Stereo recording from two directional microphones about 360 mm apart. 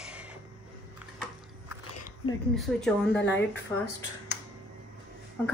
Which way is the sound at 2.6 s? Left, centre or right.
Centre.